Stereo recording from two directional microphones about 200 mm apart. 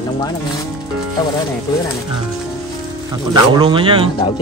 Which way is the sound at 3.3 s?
20° right (ahead or behind).